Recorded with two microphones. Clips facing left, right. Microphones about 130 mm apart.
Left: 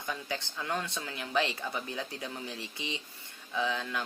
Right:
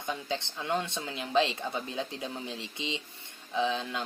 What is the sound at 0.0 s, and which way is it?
Speech, 20° right (ahead or behind).